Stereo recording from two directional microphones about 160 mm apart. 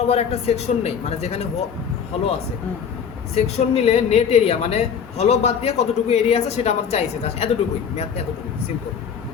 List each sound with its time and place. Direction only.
0.1 s a woman's voice: 40° left (ahead or behind)
3.3 s a woman's voice: 40° left (ahead or behind)